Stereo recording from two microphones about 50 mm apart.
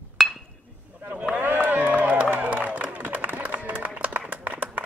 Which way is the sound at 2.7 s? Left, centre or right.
Right.